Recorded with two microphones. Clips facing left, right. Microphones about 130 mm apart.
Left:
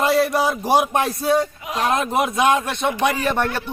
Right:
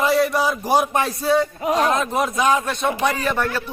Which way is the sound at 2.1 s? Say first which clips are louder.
Left 1 dB; centre (ahead or behind).